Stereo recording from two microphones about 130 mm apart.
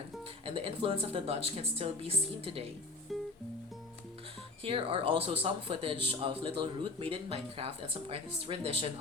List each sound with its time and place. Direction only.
0.4 s a man's voice: 45° right (ahead or behind)
3.1 s music: centre (ahead or behind)
4.6 s a man's voice: 45° right (ahead or behind)